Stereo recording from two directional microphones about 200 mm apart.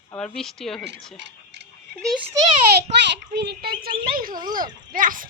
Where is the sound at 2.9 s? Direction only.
35° right (ahead or behind).